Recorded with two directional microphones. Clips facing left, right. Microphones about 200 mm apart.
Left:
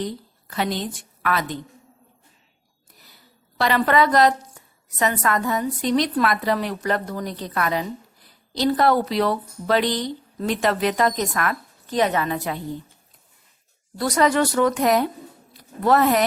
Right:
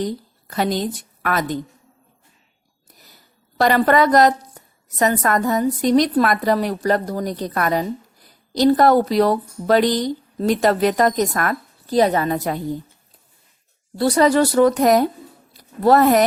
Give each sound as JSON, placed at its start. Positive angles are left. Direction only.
{"t": 0.0, "sound": "a woman's voice", "side_deg": -40}
{"t": 3.6, "sound": "a woman's voice", "side_deg": -45}
{"t": 14.0, "sound": "speech", "side_deg": -30}